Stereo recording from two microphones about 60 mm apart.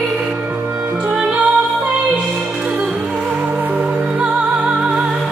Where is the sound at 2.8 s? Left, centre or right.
Centre.